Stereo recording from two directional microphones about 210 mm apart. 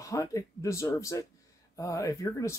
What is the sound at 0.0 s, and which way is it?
Speech, 15° left (ahead or behind).